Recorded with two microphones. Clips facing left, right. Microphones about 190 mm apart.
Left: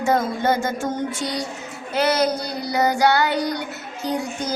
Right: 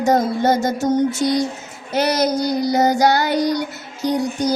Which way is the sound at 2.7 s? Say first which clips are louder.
Right 1 dB; 40° right (ahead or behind).